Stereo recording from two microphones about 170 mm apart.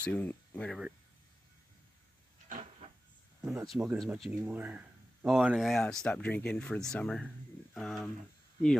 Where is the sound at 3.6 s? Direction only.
Centre (ahead or behind).